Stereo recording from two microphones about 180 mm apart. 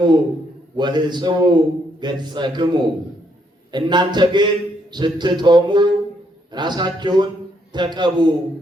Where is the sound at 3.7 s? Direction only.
25° right (ahead or behind).